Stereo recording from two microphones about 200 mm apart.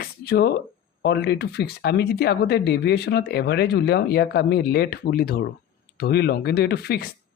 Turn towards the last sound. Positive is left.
turn(degrees=50)  # may be behind; listen again after turning